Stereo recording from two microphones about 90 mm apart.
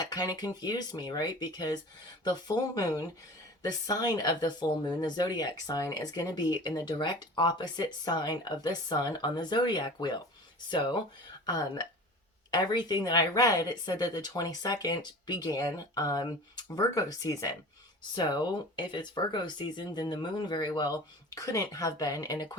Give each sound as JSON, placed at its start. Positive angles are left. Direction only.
{"t": 0.0, "sound": "speech", "side_deg": 45}
{"t": 11.4, "sound": "speech", "side_deg": 45}
{"t": 18.1, "sound": "speech", "side_deg": 50}